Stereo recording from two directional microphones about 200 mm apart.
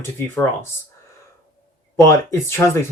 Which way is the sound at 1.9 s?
15° left (ahead or behind).